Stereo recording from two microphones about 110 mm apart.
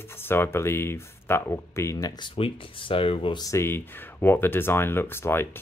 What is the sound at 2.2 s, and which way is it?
Speech, 50° left (ahead or behind).